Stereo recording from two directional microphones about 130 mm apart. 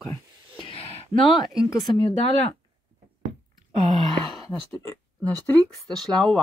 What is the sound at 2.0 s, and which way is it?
Speech, 40° left (ahead or behind).